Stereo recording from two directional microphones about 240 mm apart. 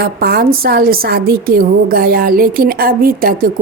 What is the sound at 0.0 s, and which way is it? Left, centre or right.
A woman's voice, right.